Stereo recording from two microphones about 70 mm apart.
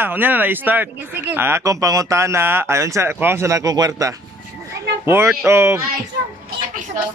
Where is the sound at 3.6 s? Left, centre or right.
Right.